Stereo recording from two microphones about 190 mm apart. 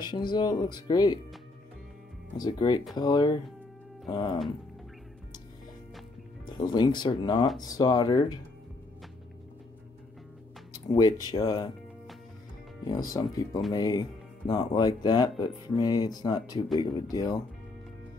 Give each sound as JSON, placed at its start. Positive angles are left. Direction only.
{"t": 0.0, "sound": "speech", "side_deg": 25}
{"t": 2.3, "sound": "speech", "side_deg": 20}
{"t": 6.5, "sound": "speech", "side_deg": 20}
{"t": 11.0, "sound": "speech", "side_deg": 20}
{"t": 12.8, "sound": "speech", "side_deg": 20}